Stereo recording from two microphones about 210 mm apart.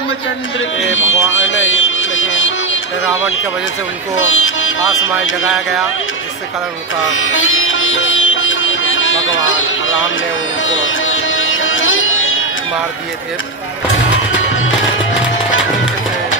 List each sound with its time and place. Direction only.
0.8 s music: 65° left (ahead or behind)
4.2 s speech: 70° left (ahead or behind)
5.5 s speech: centre (ahead or behind)
7.1 s sitar: 70° left (ahead or behind)
10.6 s music: 65° left (ahead or behind)
15.5 s music: 65° left (ahead or behind)